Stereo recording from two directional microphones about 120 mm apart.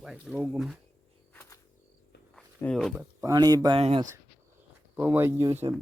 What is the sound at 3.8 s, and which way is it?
Speech, 50° right (ahead or behind).